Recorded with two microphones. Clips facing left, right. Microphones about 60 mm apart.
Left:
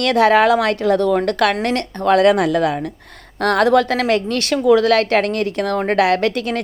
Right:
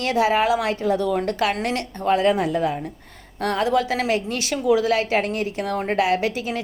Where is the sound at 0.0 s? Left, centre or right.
Left.